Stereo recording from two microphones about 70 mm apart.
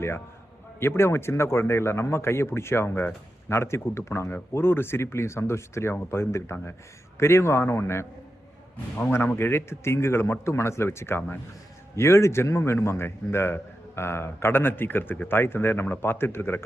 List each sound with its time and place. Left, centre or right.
0.8 s a man's voice: left